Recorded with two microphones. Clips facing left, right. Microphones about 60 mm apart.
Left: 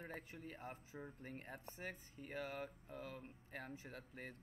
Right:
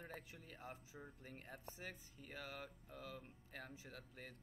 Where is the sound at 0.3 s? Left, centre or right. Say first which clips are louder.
Left 3 dB; left.